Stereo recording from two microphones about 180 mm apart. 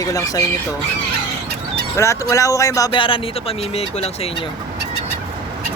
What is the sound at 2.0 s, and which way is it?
Speech, 15° left (ahead or behind).